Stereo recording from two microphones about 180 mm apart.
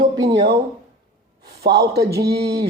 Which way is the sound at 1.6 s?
70° right (ahead or behind).